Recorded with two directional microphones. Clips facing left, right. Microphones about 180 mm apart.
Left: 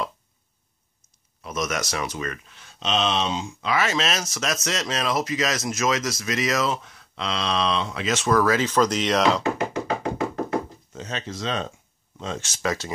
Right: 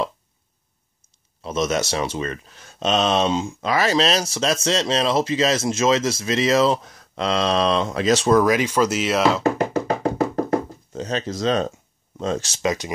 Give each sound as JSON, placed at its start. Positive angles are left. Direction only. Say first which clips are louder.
{"t": 1.0, "sound": "speech", "louder": "right 6 dB", "side_deg": -25}
{"t": 8.4, "sound": "speech", "louder": "right 2 dB", "side_deg": -15}
{"t": 9.4, "sound": "music", "louder": "right 5 dB", "side_deg": -40}
{"t": 10.9, "sound": "speech", "louder": "right 7 dB", "side_deg": -35}
{"t": 12.6, "sound": "speech", "louder": "right 3 dB", "side_deg": -15}